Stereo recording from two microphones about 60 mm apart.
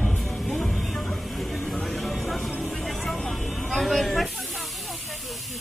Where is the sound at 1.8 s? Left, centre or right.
Centre.